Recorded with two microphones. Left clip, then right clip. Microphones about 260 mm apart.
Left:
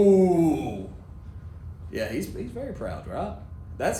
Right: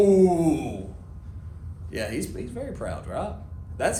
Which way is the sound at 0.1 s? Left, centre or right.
Right.